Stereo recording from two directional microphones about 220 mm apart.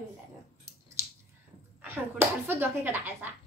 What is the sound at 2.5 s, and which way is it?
Speech, 10° right (ahead or behind).